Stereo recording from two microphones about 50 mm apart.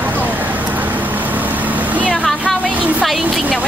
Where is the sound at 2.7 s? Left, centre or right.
Right.